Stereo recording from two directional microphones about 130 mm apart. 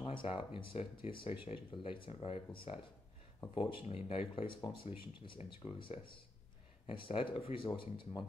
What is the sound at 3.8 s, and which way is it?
Speech, 45° left (ahead or behind).